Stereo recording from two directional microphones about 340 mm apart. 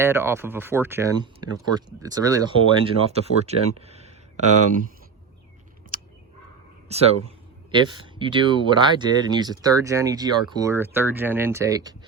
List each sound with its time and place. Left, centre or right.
0.0 s speech: centre
5.9 s a sound: right
6.8 s speech: centre